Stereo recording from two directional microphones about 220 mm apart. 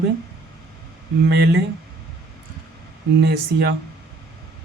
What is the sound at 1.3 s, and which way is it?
Speech, 50° right (ahead or behind).